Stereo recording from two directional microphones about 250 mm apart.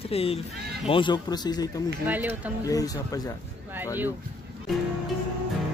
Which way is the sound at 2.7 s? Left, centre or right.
Centre.